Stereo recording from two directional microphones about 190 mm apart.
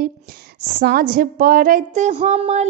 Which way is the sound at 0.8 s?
50° right (ahead or behind).